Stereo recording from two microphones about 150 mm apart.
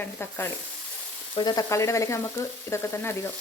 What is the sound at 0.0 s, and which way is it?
Speech, 15° left (ahead or behind).